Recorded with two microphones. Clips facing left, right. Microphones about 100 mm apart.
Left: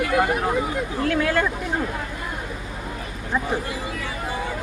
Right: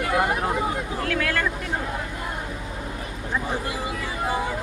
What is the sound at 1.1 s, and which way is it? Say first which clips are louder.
Speech: left 5 dB; 20° left (ahead or behind).